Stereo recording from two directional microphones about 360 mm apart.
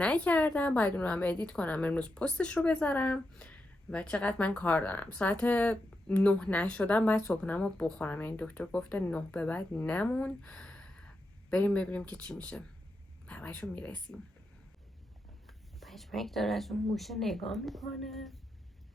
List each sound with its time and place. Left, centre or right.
0.0 s a woman's voice: centre
15.4 s speech: centre